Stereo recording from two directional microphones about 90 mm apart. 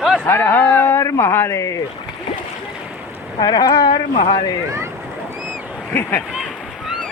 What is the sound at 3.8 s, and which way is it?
Speech, 90° left.